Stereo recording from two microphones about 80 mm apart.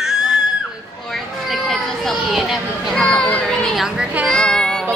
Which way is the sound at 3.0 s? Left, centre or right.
Centre.